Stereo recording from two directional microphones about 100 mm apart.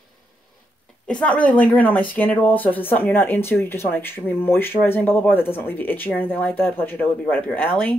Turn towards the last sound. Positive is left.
turn(degrees=20)  # may be behind; listen again after turning